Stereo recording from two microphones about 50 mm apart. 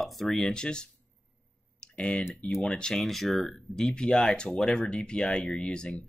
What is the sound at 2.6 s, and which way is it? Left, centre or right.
Speech, centre.